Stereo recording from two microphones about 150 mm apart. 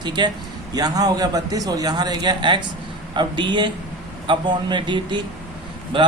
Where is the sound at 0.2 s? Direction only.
30° right (ahead or behind).